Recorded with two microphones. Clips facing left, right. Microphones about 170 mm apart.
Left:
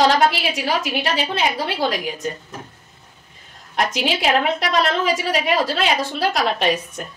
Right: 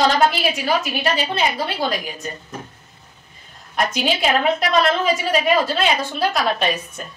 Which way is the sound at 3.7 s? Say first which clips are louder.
Even; 85° left.